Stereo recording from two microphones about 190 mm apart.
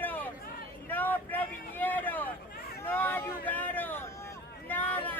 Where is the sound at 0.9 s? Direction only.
10° left (ahead or behind).